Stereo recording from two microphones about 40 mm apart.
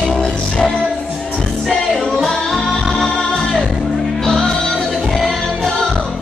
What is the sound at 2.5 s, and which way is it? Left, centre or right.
Music, centre.